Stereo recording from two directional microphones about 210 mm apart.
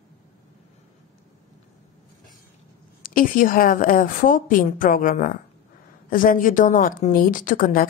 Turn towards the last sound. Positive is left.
turn(degrees=40)  # may be behind; listen again after turning